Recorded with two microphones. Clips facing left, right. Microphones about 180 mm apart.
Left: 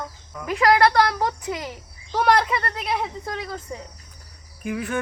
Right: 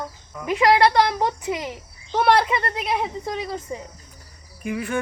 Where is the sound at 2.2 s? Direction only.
5° right (ahead or behind).